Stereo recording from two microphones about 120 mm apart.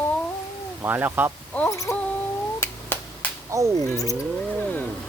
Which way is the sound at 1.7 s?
25° left (ahead or behind).